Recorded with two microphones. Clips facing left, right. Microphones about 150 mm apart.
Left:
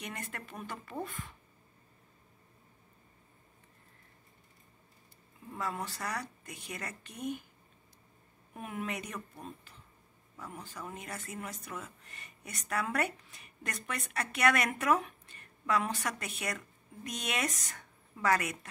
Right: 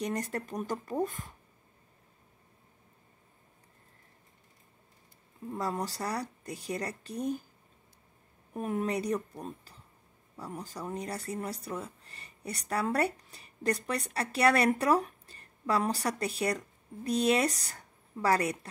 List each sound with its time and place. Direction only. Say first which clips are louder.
0.0 s speech: right 10 dB; 40° right (ahead or behind)
5.6 s speech: right 4 dB; 35° right (ahead or behind)
8.5 s a woman's voice: right 7 dB; 40° right (ahead or behind)